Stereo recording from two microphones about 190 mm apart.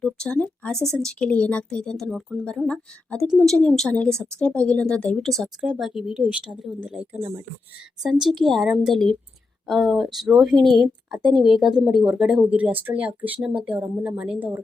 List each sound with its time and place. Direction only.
0.0 s speech: 5° left (ahead or behind); by 7.4 s 15° right (ahead or behind)
8.0 s speech: centre (ahead or behind)